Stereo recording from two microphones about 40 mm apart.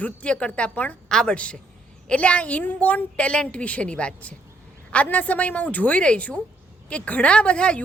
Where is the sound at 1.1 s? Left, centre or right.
Centre.